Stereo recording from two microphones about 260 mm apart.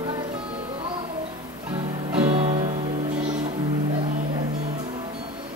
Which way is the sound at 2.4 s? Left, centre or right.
Right.